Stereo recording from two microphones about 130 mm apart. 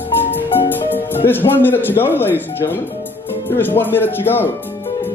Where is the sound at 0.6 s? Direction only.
15° left (ahead or behind).